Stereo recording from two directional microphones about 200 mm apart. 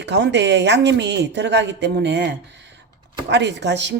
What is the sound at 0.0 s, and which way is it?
A woman's voice, 60° right (ahead or behind).